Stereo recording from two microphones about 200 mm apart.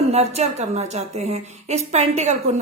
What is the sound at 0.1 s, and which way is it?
A woman's voice, 35° right (ahead or behind).